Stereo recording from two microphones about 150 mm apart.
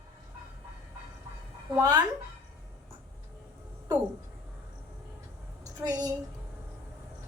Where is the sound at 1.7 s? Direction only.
25° right (ahead or behind).